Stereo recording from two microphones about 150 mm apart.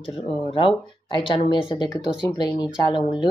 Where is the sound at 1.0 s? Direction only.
35° left (ahead or behind).